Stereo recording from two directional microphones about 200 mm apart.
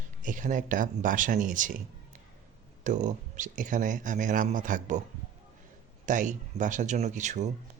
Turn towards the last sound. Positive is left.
turn(degrees=-35)  # may be behind; listen again after turning